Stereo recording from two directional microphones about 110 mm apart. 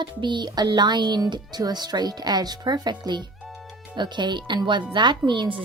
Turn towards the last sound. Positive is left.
turn(degrees=-45)  # may be behind; listen again after turning